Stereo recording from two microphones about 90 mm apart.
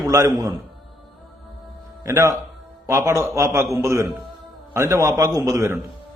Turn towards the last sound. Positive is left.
turn(degrees=-35)  # may be behind; listen again after turning